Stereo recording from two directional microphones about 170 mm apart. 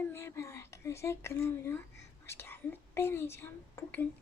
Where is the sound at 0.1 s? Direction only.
15° left (ahead or behind).